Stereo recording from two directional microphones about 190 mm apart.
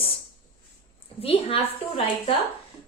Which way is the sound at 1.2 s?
30° left (ahead or behind).